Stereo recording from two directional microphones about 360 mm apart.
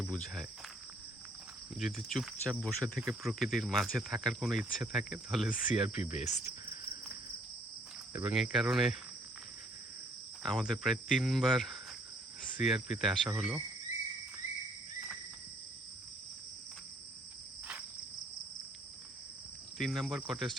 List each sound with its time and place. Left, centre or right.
0.0 s speech: centre
1.7 s speech: centre
8.1 s speech: centre
10.4 s speech: centre
19.8 s speech: centre